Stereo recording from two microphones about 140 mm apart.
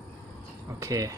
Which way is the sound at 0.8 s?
25° right (ahead or behind).